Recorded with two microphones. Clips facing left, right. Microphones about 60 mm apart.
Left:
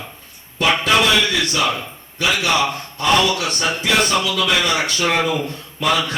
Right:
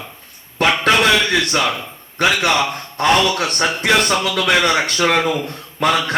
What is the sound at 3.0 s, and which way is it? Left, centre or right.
Speech, right.